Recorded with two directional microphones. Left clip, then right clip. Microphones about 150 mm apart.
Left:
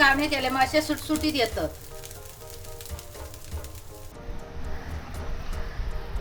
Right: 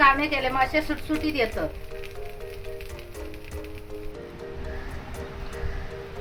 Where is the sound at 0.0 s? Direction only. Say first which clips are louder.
Right 1 dB; 20° left (ahead or behind).